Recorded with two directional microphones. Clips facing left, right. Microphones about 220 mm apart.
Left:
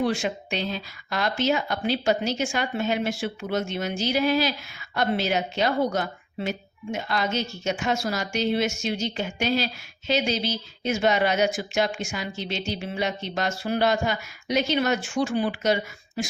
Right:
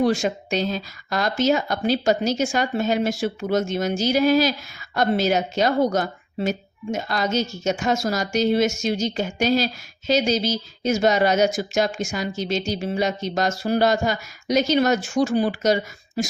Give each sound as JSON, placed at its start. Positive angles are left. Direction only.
{"t": 0.0, "sound": "speech", "side_deg": -40}